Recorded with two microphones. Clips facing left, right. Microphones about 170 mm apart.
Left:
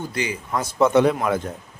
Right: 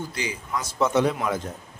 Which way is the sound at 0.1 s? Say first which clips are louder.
Left 4 dB; 55° left (ahead or behind).